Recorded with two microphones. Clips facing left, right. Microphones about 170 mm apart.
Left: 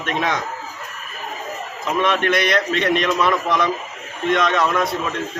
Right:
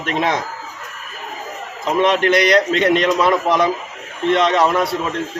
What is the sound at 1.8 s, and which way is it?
A man's voice, 30° right (ahead or behind).